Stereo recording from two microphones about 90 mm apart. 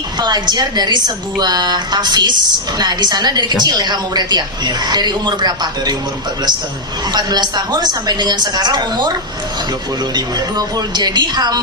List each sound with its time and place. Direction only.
0.2 s a woman's voice: 50° right (ahead or behind)
7.1 s a woman's voice: 55° right (ahead or behind)
10.2 s a woman's voice: 50° right (ahead or behind)